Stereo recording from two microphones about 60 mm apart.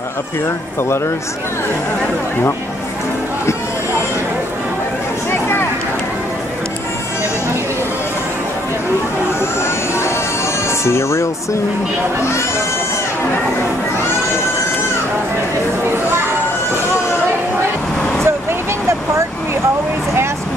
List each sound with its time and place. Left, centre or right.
0.7 s speech: left
9.4 s music: left
18.2 s vehicle: right